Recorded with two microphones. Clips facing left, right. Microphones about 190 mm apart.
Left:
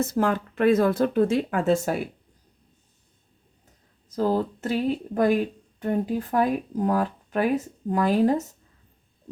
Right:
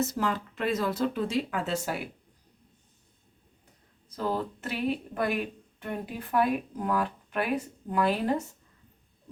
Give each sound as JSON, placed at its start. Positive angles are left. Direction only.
{"t": 0.0, "sound": "speech", "side_deg": 55}
{"t": 4.1, "sound": "speech", "side_deg": 40}